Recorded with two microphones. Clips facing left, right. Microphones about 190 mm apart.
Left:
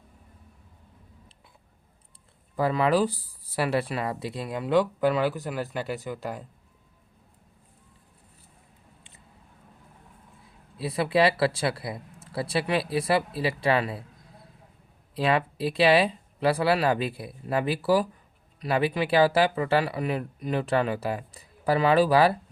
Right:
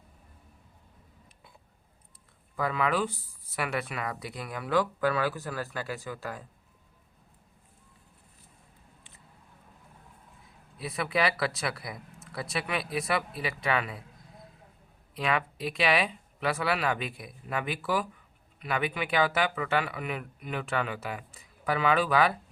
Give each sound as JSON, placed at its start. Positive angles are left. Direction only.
{"t": 2.6, "sound": "speech", "side_deg": 30}
{"t": 10.8, "sound": "speech", "side_deg": 30}
{"t": 15.1, "sound": "speech", "side_deg": 35}